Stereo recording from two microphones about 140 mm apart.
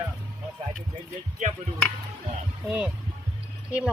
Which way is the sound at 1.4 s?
65° right (ahead or behind).